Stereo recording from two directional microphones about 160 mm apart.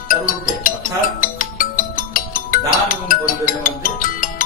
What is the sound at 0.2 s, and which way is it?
Music, 60° left (ahead or behind).